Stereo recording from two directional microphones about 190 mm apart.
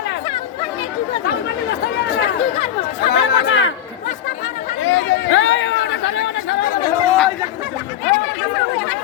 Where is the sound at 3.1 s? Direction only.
85° left.